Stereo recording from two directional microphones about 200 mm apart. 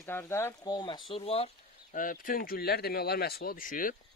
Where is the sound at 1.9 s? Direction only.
45° left (ahead or behind).